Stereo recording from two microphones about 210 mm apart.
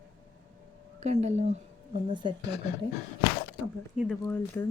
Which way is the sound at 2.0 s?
20° right (ahead or behind).